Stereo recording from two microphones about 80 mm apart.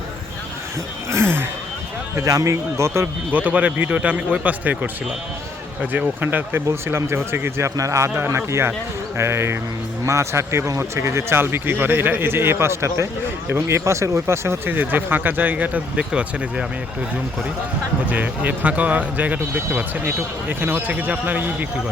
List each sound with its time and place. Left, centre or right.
1.1 s speech: right
2.1 s speech: right
3.3 s speech: centre
6.1 s speech: right
7.8 s speech: right
8.1 s speech: right
18.1 s speech: centre